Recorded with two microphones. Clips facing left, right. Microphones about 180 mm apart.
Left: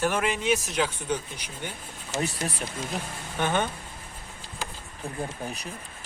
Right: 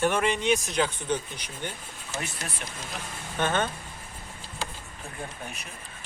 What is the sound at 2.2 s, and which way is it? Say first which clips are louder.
Speech: left 8 dB; 35° left (ahead or behind).